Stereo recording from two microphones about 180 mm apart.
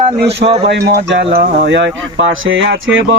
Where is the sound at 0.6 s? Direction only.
70° right (ahead or behind).